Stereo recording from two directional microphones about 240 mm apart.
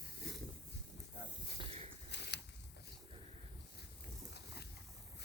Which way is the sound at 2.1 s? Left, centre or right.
Left.